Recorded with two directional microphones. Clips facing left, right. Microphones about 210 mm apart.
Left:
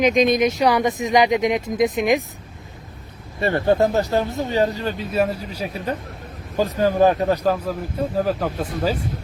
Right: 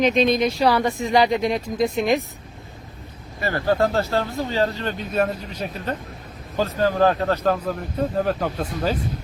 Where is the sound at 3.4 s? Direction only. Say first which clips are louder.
Left 3 dB; 25° left (ahead or behind); by 8.9 s 5° left (ahead or behind).